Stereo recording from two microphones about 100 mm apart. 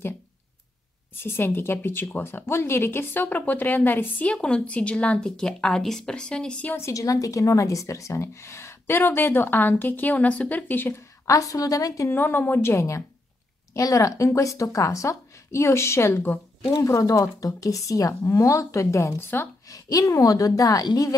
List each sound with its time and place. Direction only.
1.2 s speech: 25° left (ahead or behind)
6.8 s a woman's voice: 35° left (ahead or behind)
11.2 s speech: 35° left (ahead or behind)
12.1 s a woman's voice: 20° left (ahead or behind)
19.7 s speech: 35° left (ahead or behind)